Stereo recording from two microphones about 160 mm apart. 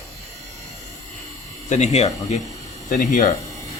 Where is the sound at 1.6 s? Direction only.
45° left (ahead or behind).